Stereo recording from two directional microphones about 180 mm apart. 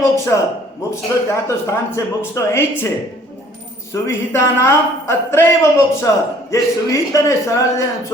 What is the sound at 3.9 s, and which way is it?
A man's voice, 15° left (ahead or behind).